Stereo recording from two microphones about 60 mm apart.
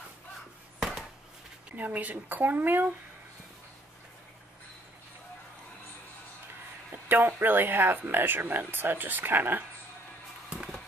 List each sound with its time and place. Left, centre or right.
1.8 s speech: right
6.9 s speech: right